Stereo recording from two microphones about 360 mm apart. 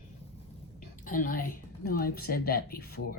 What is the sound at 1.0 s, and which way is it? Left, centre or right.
Speech, left.